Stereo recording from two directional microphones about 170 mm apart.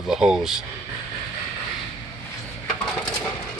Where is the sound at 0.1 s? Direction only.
5° right (ahead or behind).